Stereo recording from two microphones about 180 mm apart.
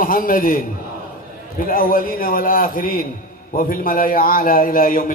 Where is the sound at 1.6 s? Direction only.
50° left (ahead or behind).